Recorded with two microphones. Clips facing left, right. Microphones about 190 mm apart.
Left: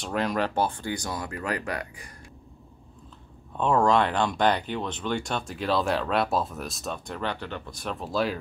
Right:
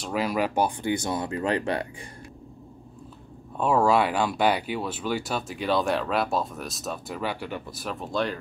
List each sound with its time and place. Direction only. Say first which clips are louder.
0.0 s speech: right 1 dB; 5° right (ahead or behind); by 2.0 s 25° right (ahead or behind)
3.5 s speech: even; 5° right (ahead or behind)